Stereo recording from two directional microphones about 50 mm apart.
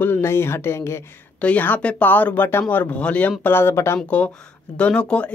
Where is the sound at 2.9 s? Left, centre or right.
Left.